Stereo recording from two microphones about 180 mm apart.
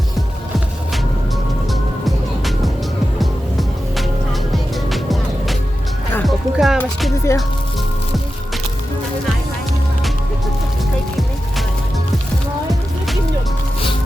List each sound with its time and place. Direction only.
3.2 s music: centre (ahead or behind)
7.3 s speech: 15° left (ahead or behind)